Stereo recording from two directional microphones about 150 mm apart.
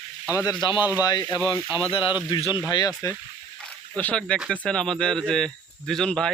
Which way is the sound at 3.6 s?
10° left (ahead or behind).